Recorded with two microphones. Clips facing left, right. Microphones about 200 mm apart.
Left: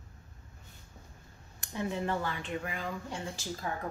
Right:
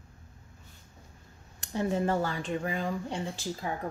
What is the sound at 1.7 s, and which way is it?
Speech, 40° right (ahead or behind).